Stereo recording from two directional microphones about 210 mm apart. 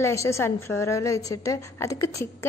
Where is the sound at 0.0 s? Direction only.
15° left (ahead or behind).